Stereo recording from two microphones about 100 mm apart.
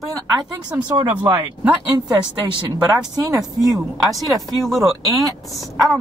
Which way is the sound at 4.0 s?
Centre (ahead or behind).